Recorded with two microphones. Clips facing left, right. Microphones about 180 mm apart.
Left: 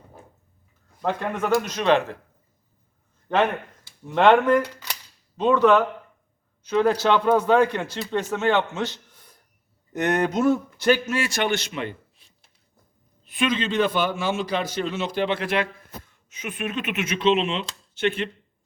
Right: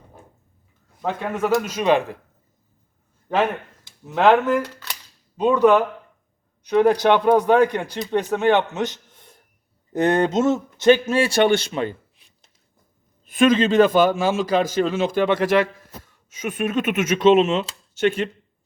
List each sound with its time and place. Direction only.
1.0 s speech: 5° right (ahead or behind)
3.2 s speech: 5° right (ahead or behind)
4.6 s speech: 10° left (ahead or behind)
5.4 s speech: 15° right (ahead or behind); by 11.9 s 35° right (ahead or behind)
13.2 s speech: 45° right (ahead or behind)
14.2 s a man's voice: 90° right
14.8 s speech: 45° right (ahead or behind)
16.5 s speech: 45° right (ahead or behind)